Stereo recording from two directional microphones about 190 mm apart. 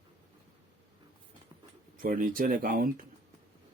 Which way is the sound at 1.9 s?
45° right (ahead or behind).